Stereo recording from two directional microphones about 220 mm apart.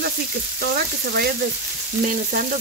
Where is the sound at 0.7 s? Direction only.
45° right (ahead or behind).